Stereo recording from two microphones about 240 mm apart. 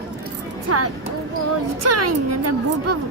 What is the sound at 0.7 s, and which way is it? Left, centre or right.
Speech, right.